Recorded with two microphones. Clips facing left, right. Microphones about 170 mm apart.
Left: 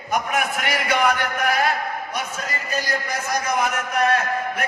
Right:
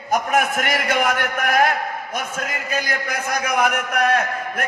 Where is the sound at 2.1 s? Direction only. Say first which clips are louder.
Right 2 dB; 50° right (ahead or behind).